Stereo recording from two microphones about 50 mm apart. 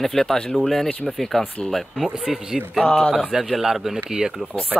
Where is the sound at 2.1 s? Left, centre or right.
Centre.